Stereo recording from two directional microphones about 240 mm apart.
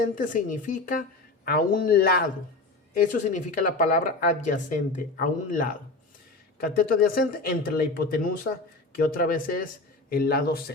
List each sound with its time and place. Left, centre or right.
0.0 s speech: left